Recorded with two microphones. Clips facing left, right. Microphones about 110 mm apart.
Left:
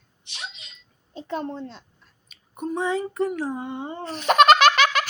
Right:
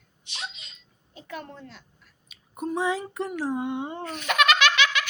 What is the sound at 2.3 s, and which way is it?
Speech, centre (ahead or behind).